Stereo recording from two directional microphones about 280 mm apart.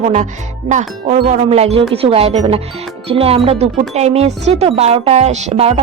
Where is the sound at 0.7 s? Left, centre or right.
Right.